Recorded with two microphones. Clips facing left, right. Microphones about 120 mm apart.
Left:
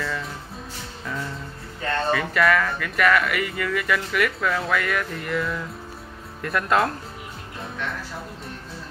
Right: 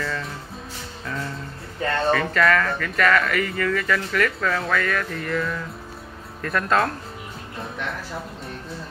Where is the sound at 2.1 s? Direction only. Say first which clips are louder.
Right 1 dB; 10° left (ahead or behind).